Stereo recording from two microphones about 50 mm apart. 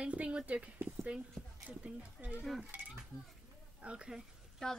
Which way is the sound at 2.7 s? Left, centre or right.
Right.